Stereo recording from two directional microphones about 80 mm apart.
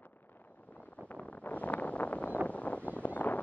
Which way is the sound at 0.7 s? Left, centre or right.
Centre.